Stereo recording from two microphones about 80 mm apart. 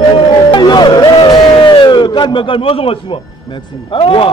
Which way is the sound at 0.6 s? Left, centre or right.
Left.